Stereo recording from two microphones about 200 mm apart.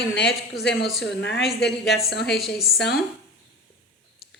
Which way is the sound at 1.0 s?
60° left (ahead or behind).